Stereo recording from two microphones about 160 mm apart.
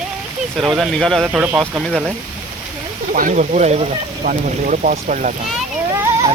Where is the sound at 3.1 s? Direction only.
55° right (ahead or behind).